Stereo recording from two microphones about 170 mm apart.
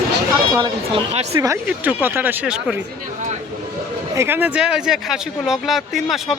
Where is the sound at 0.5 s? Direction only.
25° right (ahead or behind).